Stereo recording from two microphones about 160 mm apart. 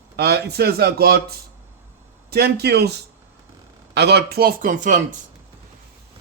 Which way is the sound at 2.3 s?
85° right.